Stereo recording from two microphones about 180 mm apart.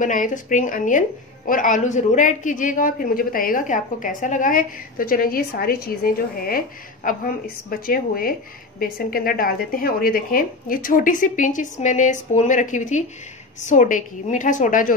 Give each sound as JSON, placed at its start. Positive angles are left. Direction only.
{"t": 0.0, "sound": "a woman's voice", "side_deg": 45}